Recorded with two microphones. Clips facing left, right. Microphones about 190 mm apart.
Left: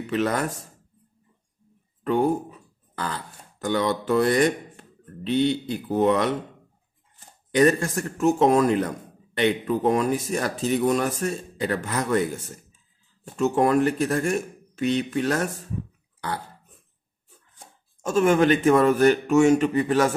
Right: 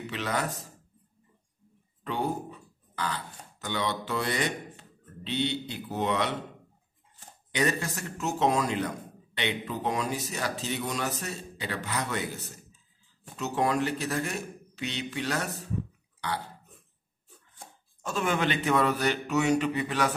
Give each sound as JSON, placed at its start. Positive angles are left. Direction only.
{"t": 0.0, "sound": "speech", "side_deg": 50}
{"t": 2.0, "sound": "speech", "side_deg": 50}
{"t": 7.5, "sound": "speech", "side_deg": 50}
{"t": 18.0, "sound": "speech", "side_deg": 45}